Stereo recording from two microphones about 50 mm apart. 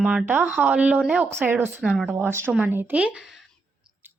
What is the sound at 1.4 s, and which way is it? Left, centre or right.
Speech, right.